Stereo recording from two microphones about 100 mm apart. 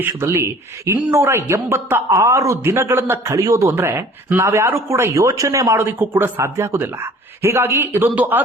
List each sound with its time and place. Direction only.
0.0 s speech: 25° right (ahead or behind)
8.1 s speech: 15° right (ahead or behind)